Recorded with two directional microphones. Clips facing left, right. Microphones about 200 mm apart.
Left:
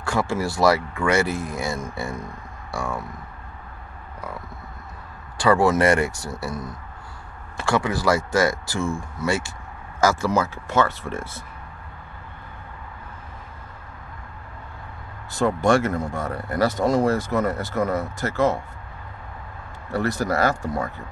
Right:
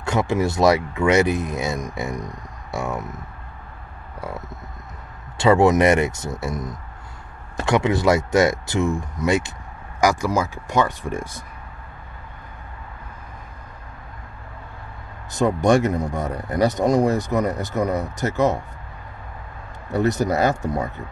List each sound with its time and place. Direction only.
0.0 s speech: 20° right (ahead or behind)
5.4 s speech: 20° right (ahead or behind)
15.3 s speech: 20° right (ahead or behind)
19.9 s speech: 20° right (ahead or behind)